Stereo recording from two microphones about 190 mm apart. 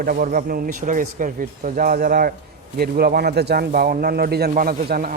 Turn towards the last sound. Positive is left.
turn(degrees=-50)  # may be behind; listen again after turning